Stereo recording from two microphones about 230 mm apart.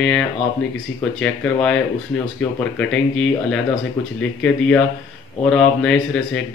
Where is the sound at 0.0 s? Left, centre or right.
Centre.